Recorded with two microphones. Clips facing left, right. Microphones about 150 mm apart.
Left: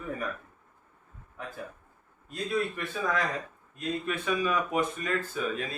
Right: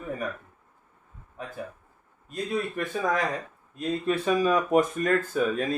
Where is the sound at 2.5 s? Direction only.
40° right (ahead or behind).